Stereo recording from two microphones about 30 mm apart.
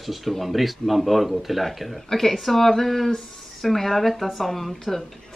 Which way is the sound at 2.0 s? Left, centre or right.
Centre.